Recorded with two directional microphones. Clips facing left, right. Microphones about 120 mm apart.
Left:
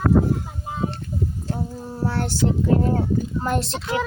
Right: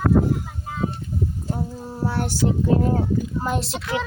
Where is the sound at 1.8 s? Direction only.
10° right (ahead or behind).